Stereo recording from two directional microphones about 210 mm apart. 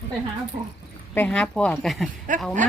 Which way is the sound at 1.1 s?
5° left (ahead or behind).